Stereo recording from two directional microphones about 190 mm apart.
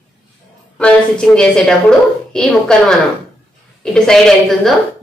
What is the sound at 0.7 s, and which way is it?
A woman's voice, 5° left (ahead or behind).